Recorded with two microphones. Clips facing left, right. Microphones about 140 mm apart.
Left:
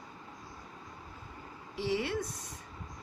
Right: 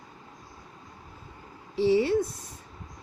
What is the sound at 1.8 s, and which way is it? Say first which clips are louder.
Speech: right 10 dB; 30° right (ahead or behind).